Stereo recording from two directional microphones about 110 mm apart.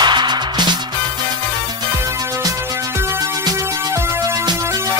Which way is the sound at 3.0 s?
25° right (ahead or behind).